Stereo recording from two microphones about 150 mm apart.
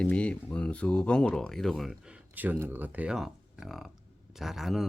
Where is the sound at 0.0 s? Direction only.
5° left (ahead or behind).